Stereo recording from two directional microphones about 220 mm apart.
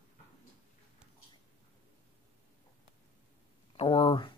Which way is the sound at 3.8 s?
25° left (ahead or behind).